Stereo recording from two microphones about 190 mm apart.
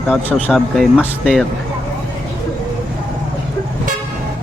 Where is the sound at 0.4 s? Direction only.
Centre (ahead or behind).